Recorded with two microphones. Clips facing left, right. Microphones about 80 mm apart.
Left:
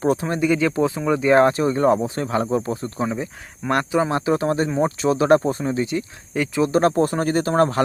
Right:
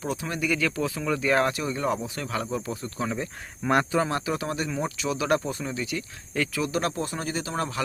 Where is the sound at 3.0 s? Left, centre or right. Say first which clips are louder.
Left 4 dB; centre.